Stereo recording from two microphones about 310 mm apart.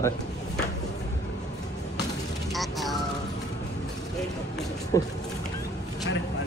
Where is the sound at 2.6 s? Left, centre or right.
Centre.